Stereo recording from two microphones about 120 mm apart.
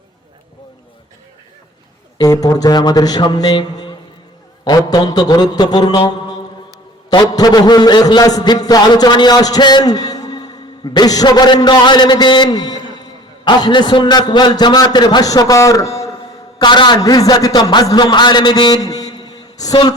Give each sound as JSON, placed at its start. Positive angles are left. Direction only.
{"t": 2.1, "sound": "a man's voice", "side_deg": 30}
{"t": 16.6, "sound": "a man's voice", "side_deg": 40}